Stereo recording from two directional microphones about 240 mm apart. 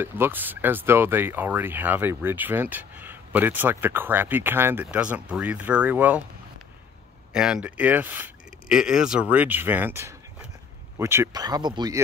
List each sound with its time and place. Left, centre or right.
0.0 s speech: centre
7.3 s speech: centre